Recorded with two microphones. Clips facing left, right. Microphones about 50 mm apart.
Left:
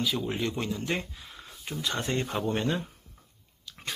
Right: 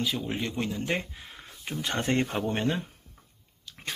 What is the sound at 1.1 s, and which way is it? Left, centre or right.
Speech, right.